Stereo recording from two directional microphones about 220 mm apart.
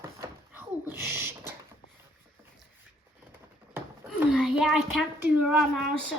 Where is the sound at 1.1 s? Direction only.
10° right (ahead or behind).